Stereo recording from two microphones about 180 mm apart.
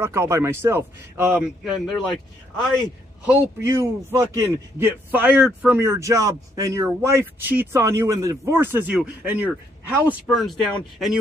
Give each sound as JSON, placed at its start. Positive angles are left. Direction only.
{"t": 0.0, "sound": "a man's voice", "side_deg": -15}
{"t": 3.3, "sound": "a man's voice", "side_deg": -15}